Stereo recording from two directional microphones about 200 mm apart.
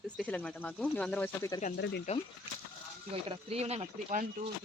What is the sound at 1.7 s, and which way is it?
Speech, 55° left (ahead or behind).